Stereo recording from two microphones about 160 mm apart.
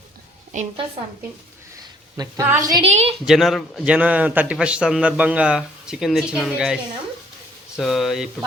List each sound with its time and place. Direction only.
0.5 s a woman's voice: 50° right (ahead or behind)
2.4 s a woman's voice: 20° right (ahead or behind)
2.8 s a woman's voice: 40° right (ahead or behind)
3.2 s a man's voice: centre (ahead or behind)
7.8 s a man's voice: centre (ahead or behind)